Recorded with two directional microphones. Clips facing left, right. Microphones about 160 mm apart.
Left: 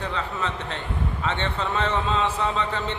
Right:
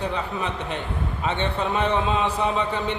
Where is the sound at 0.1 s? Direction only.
15° right (ahead or behind).